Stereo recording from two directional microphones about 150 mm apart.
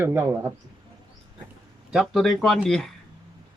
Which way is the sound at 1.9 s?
Centre (ahead or behind).